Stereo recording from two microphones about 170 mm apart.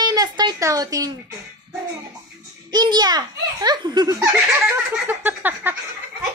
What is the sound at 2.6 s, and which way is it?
A woman's voice, 25° right (ahead or behind).